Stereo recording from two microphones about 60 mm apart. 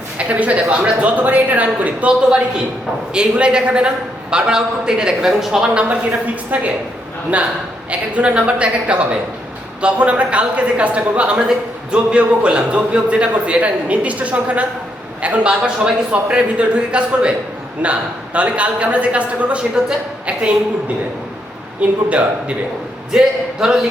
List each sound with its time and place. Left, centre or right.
0.2 s a man's voice: right
5.7 s speech: right
19.8 s a man's voice: centre
21.8 s a man's voice: right